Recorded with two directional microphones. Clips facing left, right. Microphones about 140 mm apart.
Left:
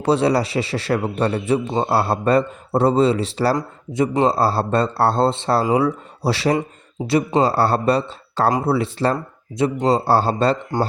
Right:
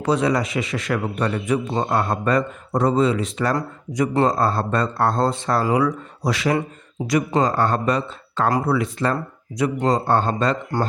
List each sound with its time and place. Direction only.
0.0 s speech: 30° left (ahead or behind)